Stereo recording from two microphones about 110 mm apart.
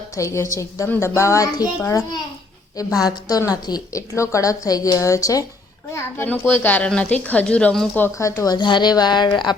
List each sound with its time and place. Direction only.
0.2 s a woman's voice: 25° left (ahead or behind); by 7.9 s 5° left (ahead or behind)
7.9 s speech: 20° left (ahead or behind)
8.5 s a woman's voice: 45° left (ahead or behind)